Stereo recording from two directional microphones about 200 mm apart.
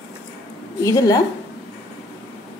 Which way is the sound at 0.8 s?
15° left (ahead or behind).